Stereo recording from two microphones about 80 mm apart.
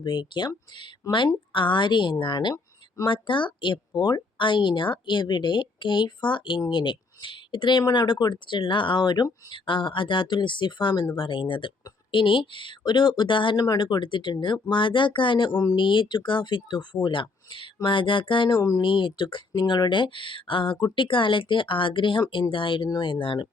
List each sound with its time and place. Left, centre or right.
0.0 s speech: left
1.1 s speech: left
3.1 s speech: left
9.5 s speech: left
11.2 s speech: left
13.6 s speech: left
15.6 s speech: left
22.9 s speech: left